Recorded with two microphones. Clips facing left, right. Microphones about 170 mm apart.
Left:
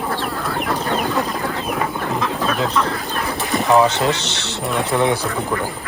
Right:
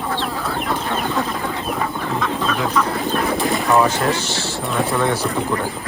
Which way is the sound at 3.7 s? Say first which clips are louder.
Left 3 dB; 20° left (ahead or behind).